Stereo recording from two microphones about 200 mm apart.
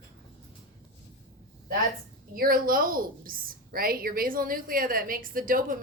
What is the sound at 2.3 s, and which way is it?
A woman's voice, 45° right (ahead or behind).